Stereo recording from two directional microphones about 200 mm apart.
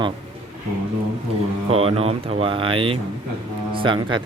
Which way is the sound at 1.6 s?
30° right (ahead or behind).